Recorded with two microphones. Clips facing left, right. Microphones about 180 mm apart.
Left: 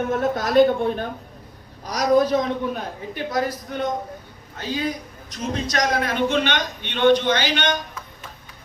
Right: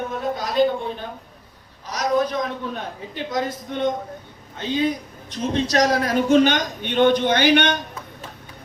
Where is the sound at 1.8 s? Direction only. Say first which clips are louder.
Left 3 dB; 35° left (ahead or behind).